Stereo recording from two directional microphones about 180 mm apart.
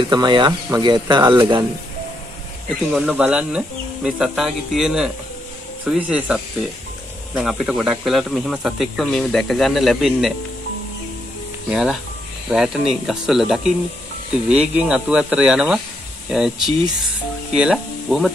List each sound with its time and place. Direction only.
0.0 s speech: 25° right (ahead or behind)
2.9 s speech: 5° right (ahead or behind)
11.7 s speech: centre (ahead or behind)